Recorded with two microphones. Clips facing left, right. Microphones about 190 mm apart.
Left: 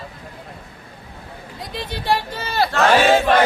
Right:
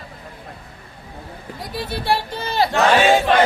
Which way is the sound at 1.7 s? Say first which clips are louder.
Even; 10° right (ahead or behind).